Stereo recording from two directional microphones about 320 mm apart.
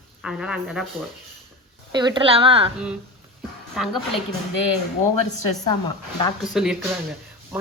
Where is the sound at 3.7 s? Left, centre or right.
Centre.